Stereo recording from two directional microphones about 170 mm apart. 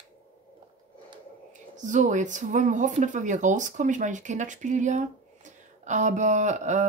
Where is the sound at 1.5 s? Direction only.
45° right (ahead or behind).